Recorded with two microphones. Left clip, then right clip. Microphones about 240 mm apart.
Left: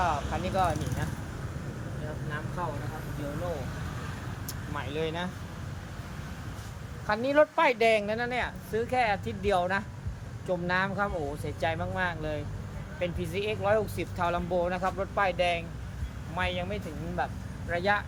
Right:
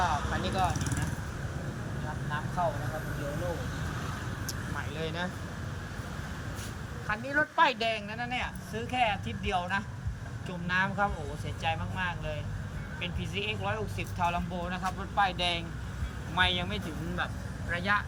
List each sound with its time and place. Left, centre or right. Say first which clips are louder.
0.0 s a sound: left 1 dB; left
4.8 s speech: left 4 dB; centre
7.1 s speech: left 6 dB; left